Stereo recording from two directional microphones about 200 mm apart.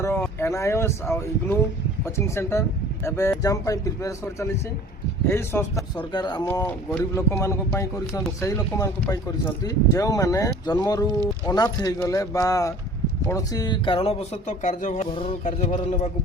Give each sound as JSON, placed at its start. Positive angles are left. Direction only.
{"t": 0.0, "sound": "speech", "side_deg": 10}
{"t": 6.5, "sound": "speech", "side_deg": 10}
{"t": 15.1, "sound": "speech", "side_deg": 25}